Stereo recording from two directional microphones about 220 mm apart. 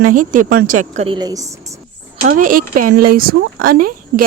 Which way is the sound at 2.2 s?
40° right (ahead or behind).